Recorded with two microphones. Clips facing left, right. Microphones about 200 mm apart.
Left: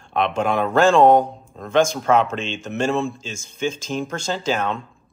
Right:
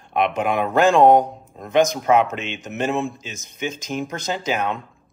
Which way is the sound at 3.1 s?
30° left (ahead or behind).